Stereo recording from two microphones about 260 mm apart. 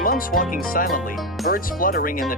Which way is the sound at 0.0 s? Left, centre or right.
Left.